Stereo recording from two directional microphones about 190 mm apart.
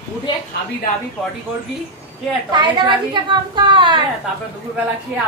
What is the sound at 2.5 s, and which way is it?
A woman's voice, 25° right (ahead or behind).